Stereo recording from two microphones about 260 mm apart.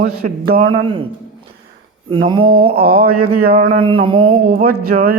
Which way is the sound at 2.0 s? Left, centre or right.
Centre.